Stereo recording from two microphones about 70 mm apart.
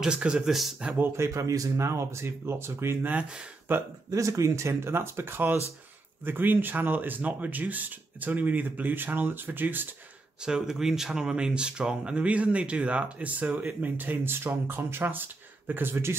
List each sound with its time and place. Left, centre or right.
0.0 s speech: centre
1.1 s speech: right
3.1 s speech: right
4.1 s speech: right
10.4 s speech: centre; by 16.2 s right